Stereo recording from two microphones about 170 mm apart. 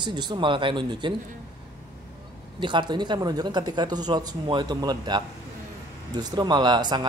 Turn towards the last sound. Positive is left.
turn(degrees=-25)  # may be behind; listen again after turning